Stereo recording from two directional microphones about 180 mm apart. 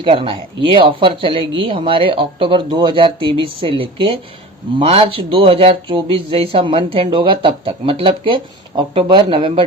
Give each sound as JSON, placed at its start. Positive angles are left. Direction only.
{"t": 0.0, "sound": "speech", "side_deg": -30}